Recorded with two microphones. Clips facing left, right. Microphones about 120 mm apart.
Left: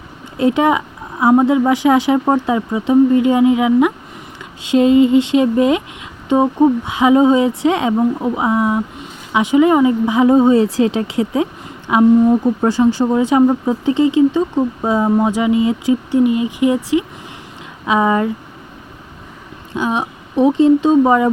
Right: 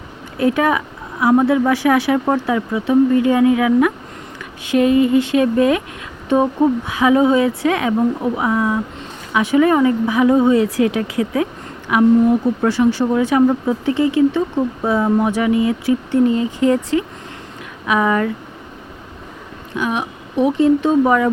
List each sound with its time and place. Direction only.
0.3 s a woman's voice: 25° left (ahead or behind)
19.7 s a woman's voice: 30° left (ahead or behind)